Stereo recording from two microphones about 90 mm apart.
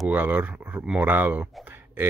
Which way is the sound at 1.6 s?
25° right (ahead or behind).